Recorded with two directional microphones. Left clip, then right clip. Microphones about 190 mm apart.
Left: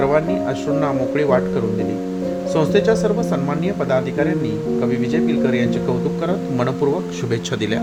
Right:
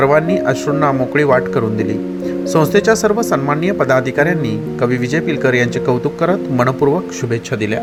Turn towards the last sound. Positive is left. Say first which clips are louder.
# right 6 dB
turn(degrees=-25)  # may be behind; listen again after turning